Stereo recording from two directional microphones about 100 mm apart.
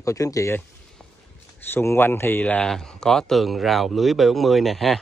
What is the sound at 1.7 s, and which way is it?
Speech, 25° left (ahead or behind).